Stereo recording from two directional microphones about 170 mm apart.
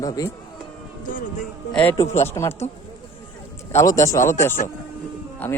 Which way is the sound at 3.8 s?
20° left (ahead or behind).